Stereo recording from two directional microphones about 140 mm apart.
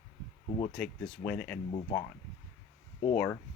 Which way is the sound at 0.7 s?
5° left (ahead or behind).